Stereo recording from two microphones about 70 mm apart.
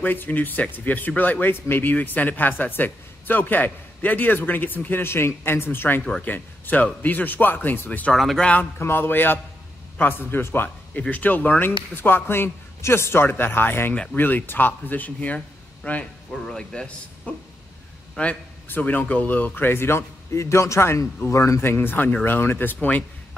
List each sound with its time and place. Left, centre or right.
0.0 s speech: left
8.1 s speech: centre
8.4 s speech: left
16.3 s speech: centre; by 23.0 s left